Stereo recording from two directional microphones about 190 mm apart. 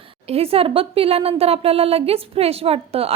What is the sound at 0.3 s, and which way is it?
A woman's voice, 30° right (ahead or behind).